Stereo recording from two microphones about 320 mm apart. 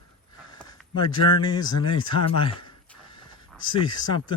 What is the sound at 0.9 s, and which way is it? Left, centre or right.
Speech, centre.